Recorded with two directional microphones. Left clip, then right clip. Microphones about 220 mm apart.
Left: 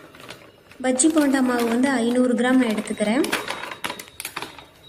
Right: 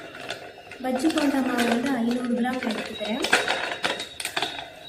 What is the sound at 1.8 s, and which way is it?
Speech, 45° left (ahead or behind).